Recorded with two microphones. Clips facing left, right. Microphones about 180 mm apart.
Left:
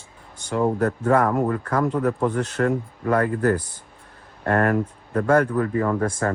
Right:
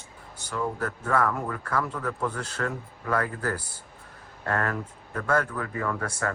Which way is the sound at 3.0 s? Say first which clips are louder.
Left 7 dB; 35° left (ahead or behind).